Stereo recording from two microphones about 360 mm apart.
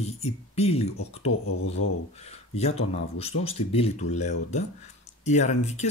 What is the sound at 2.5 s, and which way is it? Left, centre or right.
Speech, centre.